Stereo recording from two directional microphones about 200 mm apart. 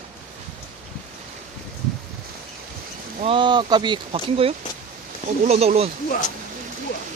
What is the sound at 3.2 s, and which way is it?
Speech, 25° right (ahead or behind).